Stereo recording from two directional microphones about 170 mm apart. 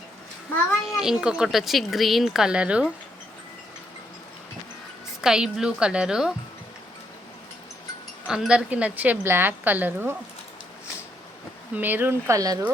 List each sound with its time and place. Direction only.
0.9 s speech: 5° right (ahead or behind)
5.2 s speech: 5° right (ahead or behind)
8.3 s a woman's voice: 5° right (ahead or behind)
11.8 s a woman's voice: 10° right (ahead or behind)